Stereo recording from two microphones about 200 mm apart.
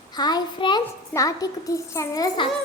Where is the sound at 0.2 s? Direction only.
20° left (ahead or behind).